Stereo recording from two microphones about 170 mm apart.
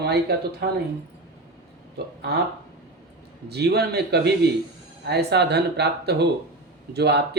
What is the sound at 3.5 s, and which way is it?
Speech, 70° right (ahead or behind).